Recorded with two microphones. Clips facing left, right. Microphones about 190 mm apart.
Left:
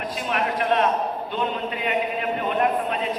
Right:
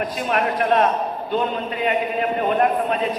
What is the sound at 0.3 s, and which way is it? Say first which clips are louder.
A man's voice: right 3 dB; 50° right (ahead or behind).